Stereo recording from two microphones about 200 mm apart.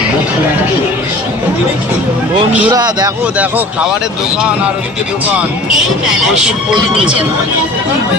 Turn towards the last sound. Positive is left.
turn(degrees=-5)  # may be behind; listen again after turning